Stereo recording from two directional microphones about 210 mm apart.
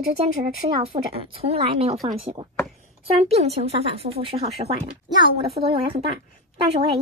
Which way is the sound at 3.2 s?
30° right (ahead or behind).